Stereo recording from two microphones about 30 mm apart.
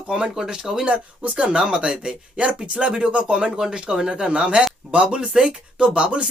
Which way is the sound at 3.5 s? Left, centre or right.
Centre.